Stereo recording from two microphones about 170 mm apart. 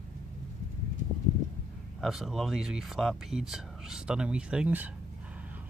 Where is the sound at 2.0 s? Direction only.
Centre (ahead or behind).